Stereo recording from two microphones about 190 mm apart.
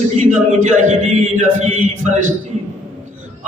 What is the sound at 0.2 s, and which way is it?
Speech, 40° right (ahead or behind).